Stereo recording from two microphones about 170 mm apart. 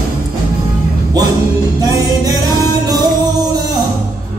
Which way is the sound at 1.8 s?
20° right (ahead or behind).